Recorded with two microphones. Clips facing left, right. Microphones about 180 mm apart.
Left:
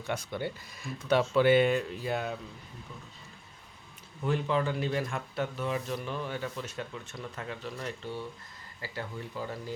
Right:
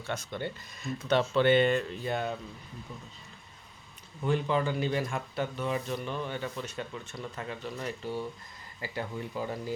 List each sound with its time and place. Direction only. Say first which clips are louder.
0.0 s speech: left 1 dB; 10° left (ahead or behind)
4.2 s speech: right 1 dB; centre (ahead or behind); by 9.7 s 15° right (ahead or behind)